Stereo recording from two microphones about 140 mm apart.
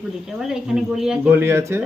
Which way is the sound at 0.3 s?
Centre (ahead or behind).